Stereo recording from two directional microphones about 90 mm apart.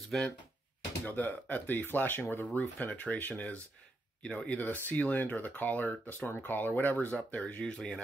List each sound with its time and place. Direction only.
0.1 s speech: 5° left (ahead or behind)
1.0 s speech: 20° left (ahead or behind)